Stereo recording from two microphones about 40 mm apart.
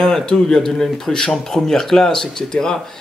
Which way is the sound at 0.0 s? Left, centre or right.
Centre.